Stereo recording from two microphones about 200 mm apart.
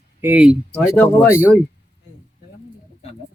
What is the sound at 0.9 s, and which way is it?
Speech, 10° left (ahead or behind).